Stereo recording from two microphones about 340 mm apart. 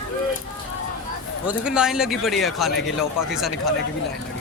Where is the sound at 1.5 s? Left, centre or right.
Centre.